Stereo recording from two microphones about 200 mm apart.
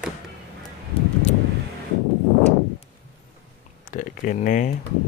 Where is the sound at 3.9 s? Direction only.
40° left (ahead or behind).